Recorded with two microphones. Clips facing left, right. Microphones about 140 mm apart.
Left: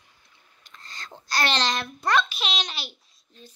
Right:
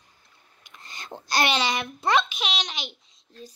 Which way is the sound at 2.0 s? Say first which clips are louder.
Right 1 dB; 20° right (ahead or behind).